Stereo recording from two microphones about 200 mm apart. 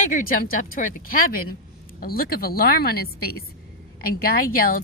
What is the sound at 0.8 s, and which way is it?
A woman's voice, 45° left (ahead or behind).